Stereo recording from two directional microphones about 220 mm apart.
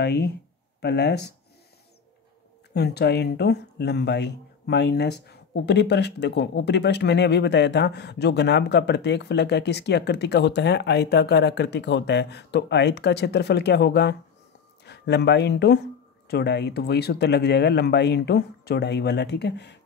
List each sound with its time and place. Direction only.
0.0 s speech: 50° left (ahead or behind)
2.7 s speech: 50° left (ahead or behind)